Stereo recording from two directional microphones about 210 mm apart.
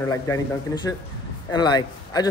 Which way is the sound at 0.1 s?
15° left (ahead or behind).